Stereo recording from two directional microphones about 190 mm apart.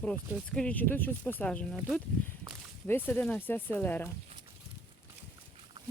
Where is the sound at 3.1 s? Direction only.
10° left (ahead or behind).